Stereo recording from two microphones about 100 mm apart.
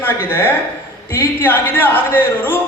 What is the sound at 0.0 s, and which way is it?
A man's voice, 20° left (ahead or behind).